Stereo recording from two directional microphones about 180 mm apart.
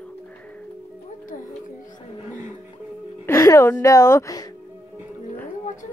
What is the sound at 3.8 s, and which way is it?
Speech, 15° left (ahead or behind).